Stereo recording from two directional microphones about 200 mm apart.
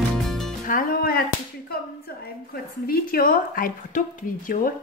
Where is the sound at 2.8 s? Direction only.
45° left (ahead or behind).